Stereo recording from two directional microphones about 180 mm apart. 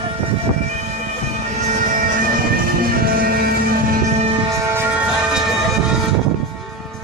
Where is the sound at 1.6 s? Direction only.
45° right (ahead or behind).